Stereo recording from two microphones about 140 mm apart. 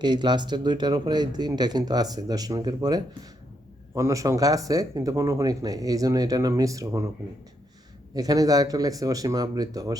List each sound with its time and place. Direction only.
0.0 s speech: 30° right (ahead or behind)
8.1 s speech: 25° right (ahead or behind)